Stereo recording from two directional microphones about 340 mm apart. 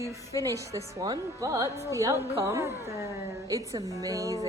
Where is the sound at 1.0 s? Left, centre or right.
Centre.